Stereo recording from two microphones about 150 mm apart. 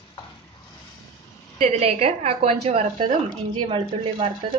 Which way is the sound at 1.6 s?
45° right (ahead or behind).